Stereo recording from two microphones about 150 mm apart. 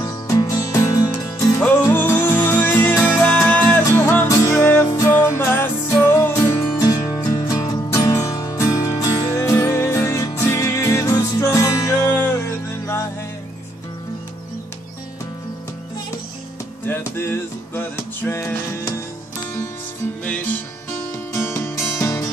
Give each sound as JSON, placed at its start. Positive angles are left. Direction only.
{"t": 0.0, "sound": "music", "side_deg": 25}
{"t": 1.9, "sound": "music", "side_deg": 10}
{"t": 3.8, "sound": "music", "side_deg": 25}
{"t": 16.8, "sound": "music", "side_deg": 15}
{"t": 20.2, "sound": "music", "side_deg": 10}